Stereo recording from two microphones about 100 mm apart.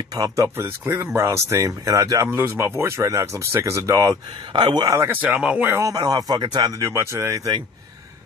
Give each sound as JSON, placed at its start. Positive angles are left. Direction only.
{"t": 0.1, "sound": "speech", "side_deg": -40}
{"t": 0.6, "sound": "speech", "side_deg": -25}
{"t": 2.2, "sound": "speech", "side_deg": -25}
{"t": 4.5, "sound": "speech", "side_deg": -50}
{"t": 5.0, "sound": "speech", "side_deg": -15}
{"t": 5.8, "sound": "speech", "side_deg": -35}
{"t": 6.7, "sound": "speech", "side_deg": -30}